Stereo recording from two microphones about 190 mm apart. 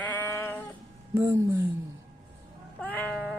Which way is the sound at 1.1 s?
20° right (ahead or behind).